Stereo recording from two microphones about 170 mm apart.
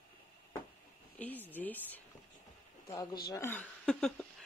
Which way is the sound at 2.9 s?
25° left (ahead or behind).